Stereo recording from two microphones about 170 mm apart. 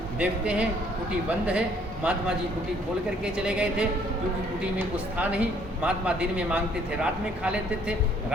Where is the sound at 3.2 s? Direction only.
5° right (ahead or behind).